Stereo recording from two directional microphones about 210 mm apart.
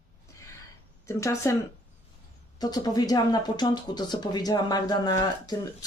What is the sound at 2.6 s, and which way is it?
Speech, 20° left (ahead or behind).